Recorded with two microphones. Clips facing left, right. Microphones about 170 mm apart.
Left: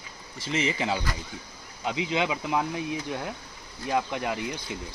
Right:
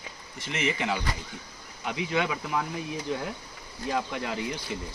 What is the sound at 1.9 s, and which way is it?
Speech, 20° left (ahead or behind).